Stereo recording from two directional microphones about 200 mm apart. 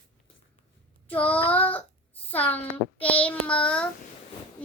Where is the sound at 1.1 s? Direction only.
5° left (ahead or behind).